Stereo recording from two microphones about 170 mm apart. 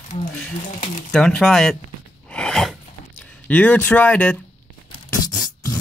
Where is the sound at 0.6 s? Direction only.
45° left (ahead or behind).